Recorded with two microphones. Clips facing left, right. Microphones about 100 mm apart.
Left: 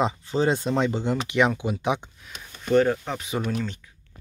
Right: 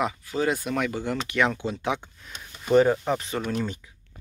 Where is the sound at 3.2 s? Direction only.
Centre (ahead or behind).